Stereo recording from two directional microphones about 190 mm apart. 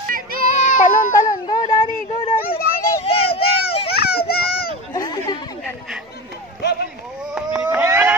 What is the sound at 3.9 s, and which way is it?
Children playing, 55° left (ahead or behind).